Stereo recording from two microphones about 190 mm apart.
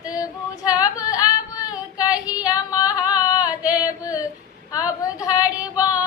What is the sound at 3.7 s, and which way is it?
Carnatic music, 20° left (ahead or behind).